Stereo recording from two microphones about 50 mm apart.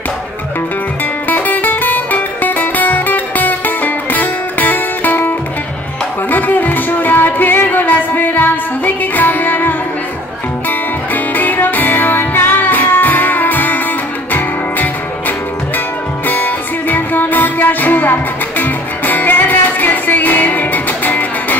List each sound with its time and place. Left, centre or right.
1.3 s music: left
6.3 s music: left
11.3 s music: left